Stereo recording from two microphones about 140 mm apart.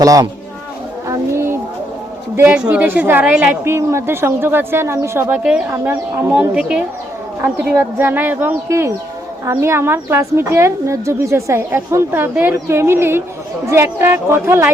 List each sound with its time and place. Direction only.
0.0 s a woman's voice: 25° right (ahead or behind)
1.0 s a sound: 20° right (ahead or behind)
2.3 s a woman's voice: 15° right (ahead or behind)
5.4 s a woman's voice: 5° right (ahead or behind)
5.7 s a woman's voice: 20° right (ahead or behind)
6.5 s a woman's voice: 5° right (ahead or behind)